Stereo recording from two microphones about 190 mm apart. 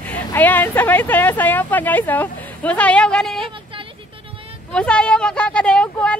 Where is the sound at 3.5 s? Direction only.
25° right (ahead or behind).